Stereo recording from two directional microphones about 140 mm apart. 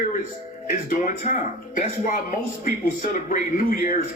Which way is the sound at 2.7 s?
75° left (ahead or behind).